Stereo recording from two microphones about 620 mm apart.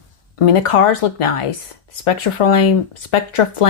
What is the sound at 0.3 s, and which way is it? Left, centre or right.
A woman's voice, left.